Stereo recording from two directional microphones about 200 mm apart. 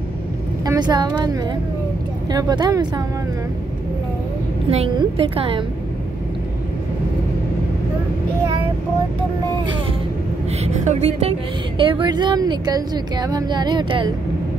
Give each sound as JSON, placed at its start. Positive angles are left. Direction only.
{"t": 0.7, "sound": "a woman's voice", "side_deg": -20}
{"t": 4.6, "sound": "a woman's voice", "side_deg": -30}
{"t": 10.6, "sound": "a woman's voice", "side_deg": -35}